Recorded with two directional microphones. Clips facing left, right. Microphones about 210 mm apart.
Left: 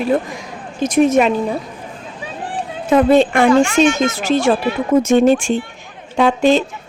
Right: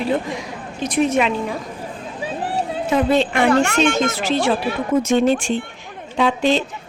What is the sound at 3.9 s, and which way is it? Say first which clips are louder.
Speech: left 3 dB; 45° left (ahead or behind).